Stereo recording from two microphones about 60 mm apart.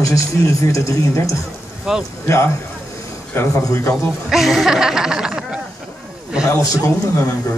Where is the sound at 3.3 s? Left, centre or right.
Left.